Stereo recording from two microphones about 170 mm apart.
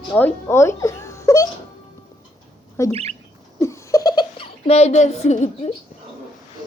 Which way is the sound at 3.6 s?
20° left (ahead or behind).